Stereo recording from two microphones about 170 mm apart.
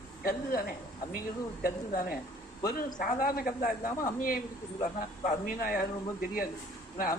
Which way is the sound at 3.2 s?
55° left (ahead or behind).